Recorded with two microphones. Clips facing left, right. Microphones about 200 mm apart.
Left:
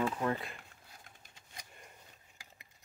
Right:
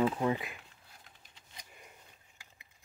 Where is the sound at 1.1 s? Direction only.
45° left (ahead or behind).